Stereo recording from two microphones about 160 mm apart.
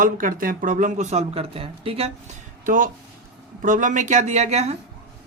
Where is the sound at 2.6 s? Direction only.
55° right (ahead or behind).